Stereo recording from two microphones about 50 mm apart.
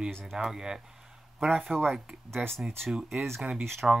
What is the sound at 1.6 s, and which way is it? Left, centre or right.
Speech, centre.